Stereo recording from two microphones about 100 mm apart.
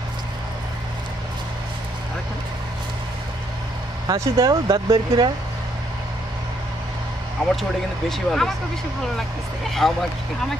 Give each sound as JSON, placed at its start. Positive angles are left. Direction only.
{"t": 4.1, "sound": "speech", "side_deg": -45}
{"t": 4.8, "sound": "speech", "side_deg": -55}
{"t": 7.4, "sound": "speech", "side_deg": 5}
{"t": 9.7, "sound": "speech", "side_deg": 0}